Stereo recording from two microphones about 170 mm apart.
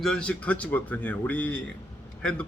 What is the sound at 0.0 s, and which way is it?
A man's voice, 5° left (ahead or behind).